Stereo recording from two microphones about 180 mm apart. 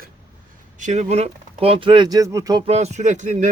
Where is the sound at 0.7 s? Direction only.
40° right (ahead or behind); by 2.6 s 20° right (ahead or behind).